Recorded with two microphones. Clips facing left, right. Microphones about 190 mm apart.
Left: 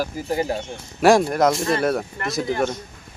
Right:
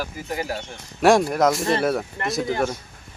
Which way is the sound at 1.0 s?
Centre (ahead or behind).